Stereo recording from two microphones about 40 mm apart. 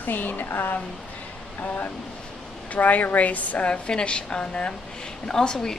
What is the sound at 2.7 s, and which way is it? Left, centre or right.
A woman's voice, left.